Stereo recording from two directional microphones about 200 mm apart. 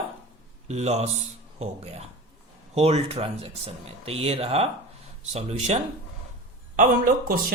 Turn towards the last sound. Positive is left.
turn(degrees=-45)  # may be behind; listen again after turning